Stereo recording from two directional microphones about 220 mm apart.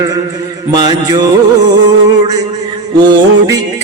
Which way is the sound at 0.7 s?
20° right (ahead or behind).